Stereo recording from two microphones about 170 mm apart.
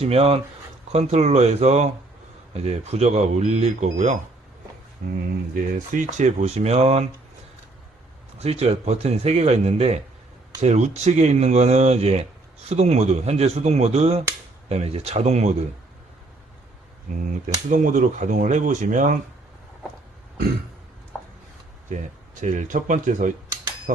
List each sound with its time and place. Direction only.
0.0 s speech: 35° right (ahead or behind)
8.4 s speech: 35° right (ahead or behind)
17.7 s speech: 50° right (ahead or behind)
21.9 s speech: 50° right (ahead or behind)